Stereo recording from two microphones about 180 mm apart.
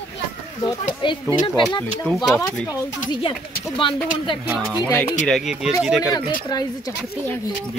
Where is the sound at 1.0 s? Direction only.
25° left (ahead or behind).